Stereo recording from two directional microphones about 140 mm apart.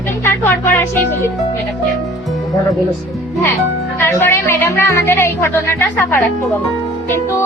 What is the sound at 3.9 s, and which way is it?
Speech, 20° left (ahead or behind).